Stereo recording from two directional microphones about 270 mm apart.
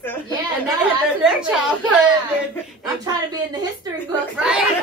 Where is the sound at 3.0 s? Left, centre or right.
Centre.